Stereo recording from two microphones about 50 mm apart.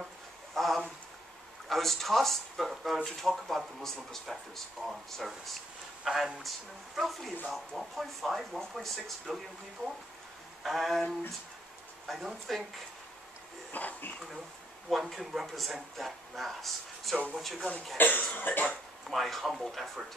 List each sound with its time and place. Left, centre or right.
0.6 s a sound: centre
1.7 s speech: centre
10.6 s speech: centre
13.7 s speech: left
14.9 s speech: centre
17.9 s speech: left
19.0 s speech: centre